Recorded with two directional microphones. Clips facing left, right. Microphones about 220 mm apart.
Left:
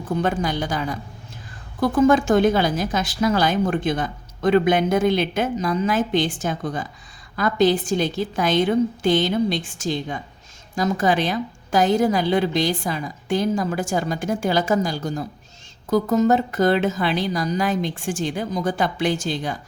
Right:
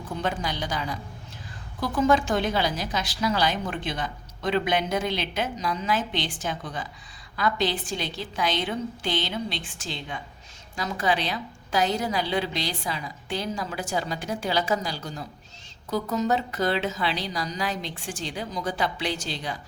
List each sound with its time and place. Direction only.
0.2 s a woman's voice: 50° left (ahead or behind)